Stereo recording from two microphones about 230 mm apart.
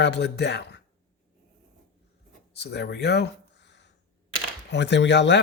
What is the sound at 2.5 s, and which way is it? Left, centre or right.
Speech, left.